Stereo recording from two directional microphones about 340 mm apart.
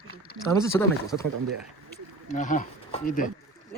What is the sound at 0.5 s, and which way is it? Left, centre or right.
Speech, centre.